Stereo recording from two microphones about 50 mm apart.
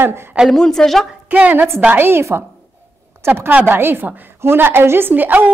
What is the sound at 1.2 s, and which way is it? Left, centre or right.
Speech, right.